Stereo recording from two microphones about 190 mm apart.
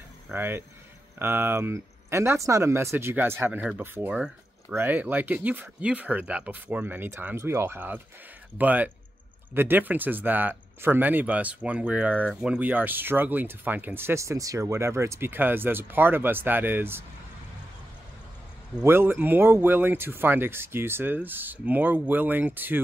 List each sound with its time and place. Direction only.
0.3 s speech: 10° right (ahead or behind)
18.8 s speech: 10° right (ahead or behind)